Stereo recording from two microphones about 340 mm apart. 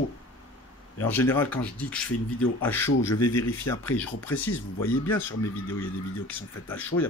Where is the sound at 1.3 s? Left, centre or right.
Centre.